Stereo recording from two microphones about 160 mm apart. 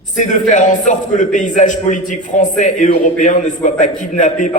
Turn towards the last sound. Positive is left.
turn(degrees=50)  # may be behind; listen again after turning